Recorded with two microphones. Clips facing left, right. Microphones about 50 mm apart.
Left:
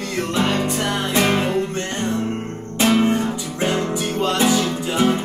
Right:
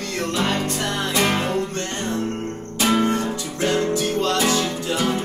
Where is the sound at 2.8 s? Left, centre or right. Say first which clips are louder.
Left 3 dB; left.